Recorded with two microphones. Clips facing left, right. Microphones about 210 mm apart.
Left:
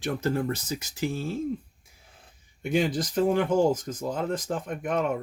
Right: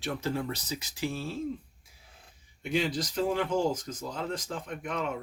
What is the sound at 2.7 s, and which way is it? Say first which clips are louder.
Speech: left 4 dB; 50° left (ahead or behind).